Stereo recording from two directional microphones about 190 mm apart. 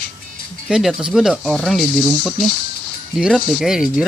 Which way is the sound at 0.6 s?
Centre (ahead or behind).